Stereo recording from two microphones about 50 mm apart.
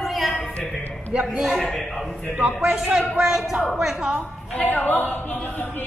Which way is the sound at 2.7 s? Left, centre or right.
Centre.